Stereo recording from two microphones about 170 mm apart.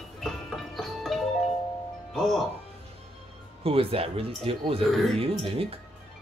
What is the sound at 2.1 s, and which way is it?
Speech, centre (ahead or behind).